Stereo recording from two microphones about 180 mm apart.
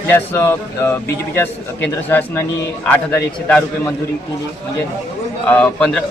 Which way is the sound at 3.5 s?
10° left (ahead or behind).